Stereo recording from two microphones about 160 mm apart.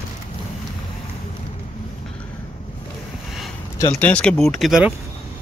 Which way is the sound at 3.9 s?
5° left (ahead or behind).